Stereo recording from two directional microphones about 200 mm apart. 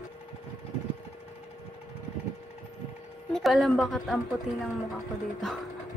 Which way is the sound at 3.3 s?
Centre (ahead or behind).